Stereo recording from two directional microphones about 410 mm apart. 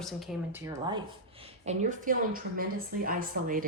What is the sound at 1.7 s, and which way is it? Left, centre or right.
A woman's voice, centre.